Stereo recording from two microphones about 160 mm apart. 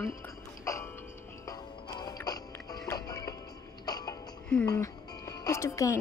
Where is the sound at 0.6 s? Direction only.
20° left (ahead or behind).